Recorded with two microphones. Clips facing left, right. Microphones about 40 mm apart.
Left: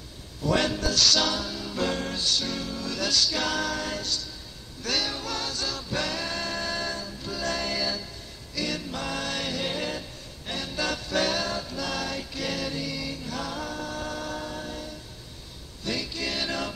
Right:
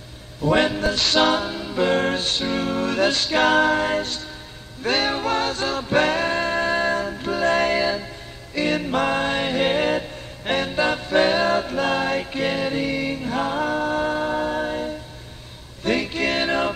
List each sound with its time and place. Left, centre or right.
0.4 s music: right
2.0 s music: right
10.7 s music: right